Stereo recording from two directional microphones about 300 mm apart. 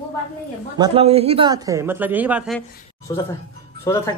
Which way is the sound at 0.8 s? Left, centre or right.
Centre.